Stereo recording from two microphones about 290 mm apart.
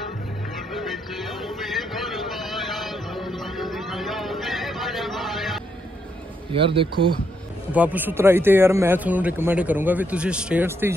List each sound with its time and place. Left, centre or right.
0.7 s music: centre
6.5 s a man's voice: centre
7.7 s a man's voice: centre